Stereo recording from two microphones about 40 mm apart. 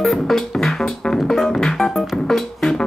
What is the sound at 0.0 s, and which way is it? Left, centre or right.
Music, centre.